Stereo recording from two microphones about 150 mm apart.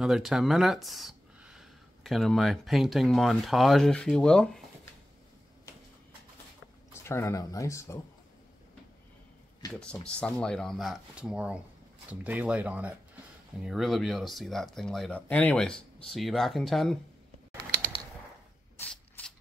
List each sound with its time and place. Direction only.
0.0 s speech: centre (ahead or behind)
6.9 s speech: 15° left (ahead or behind)
10.0 s speech: 5° left (ahead or behind)
18.8 s spray: 10° left (ahead or behind)